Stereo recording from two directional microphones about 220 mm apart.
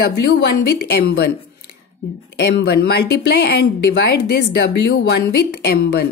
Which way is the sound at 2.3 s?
50° left (ahead or behind).